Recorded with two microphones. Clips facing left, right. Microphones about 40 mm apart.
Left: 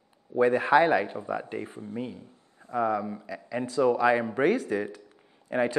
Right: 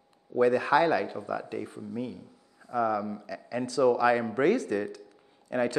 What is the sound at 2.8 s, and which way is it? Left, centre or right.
A man's voice, left.